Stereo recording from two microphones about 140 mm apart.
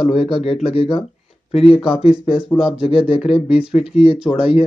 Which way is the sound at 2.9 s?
40° left (ahead or behind).